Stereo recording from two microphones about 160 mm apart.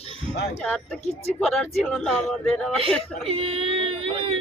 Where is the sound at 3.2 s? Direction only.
35° right (ahead or behind).